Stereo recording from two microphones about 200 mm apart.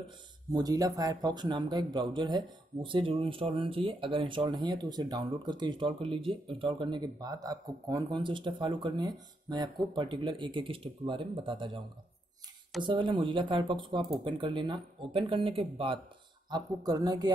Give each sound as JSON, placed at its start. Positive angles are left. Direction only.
{"t": 0.5, "sound": "speech", "side_deg": -20}
{"t": 12.8, "sound": "speech", "side_deg": -25}